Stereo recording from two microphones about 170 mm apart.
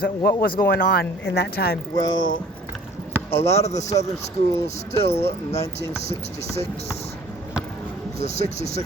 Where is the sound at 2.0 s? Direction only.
25° left (ahead or behind).